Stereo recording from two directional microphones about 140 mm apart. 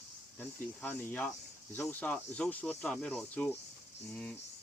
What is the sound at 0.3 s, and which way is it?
Speech, 10° left (ahead or behind).